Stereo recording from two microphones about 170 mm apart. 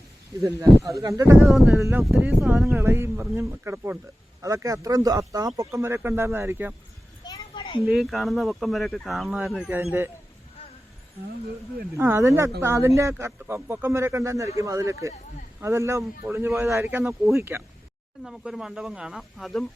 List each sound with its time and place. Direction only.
0.4 s speech: 20° right (ahead or behind)
1.5 s speech: centre (ahead or behind)
1.8 s speech: 10° right (ahead or behind)
2.7 s speech: 15° right (ahead or behind)
7.3 s a sound: 30° left (ahead or behind)
7.9 s speech: centre (ahead or behind)
11.9 s speech: 15° right (ahead or behind)
18.2 s speech: centre (ahead or behind)